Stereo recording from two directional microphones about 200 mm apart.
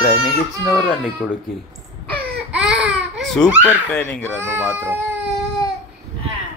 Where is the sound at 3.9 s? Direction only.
5° left (ahead or behind).